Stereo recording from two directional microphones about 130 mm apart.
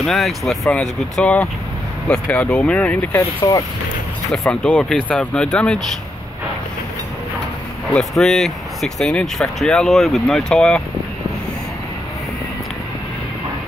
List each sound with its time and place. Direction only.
0.0 s speech: centre (ahead or behind)
3.2 s speech: 25° left (ahead or behind)
4.3 s speech: 10° left (ahead or behind)
7.9 s speech: centre (ahead or behind)